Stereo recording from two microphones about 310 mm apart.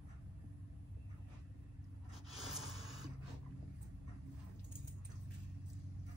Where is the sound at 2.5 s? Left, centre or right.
Centre.